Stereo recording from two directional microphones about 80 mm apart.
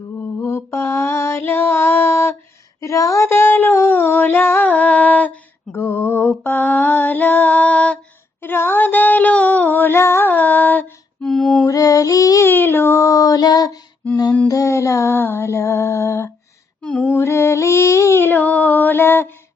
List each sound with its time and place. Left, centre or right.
0.2 s female singing: left
2.8 s female singing: left; by 5.4 s centre
5.7 s female singing: left
8.4 s a sound: left; by 11.6 s centre
11.7 s child singing: left
12.5 s child singing: left
14.4 s a sound: left
16.8 s female singing: centre
17.1 s female singing: left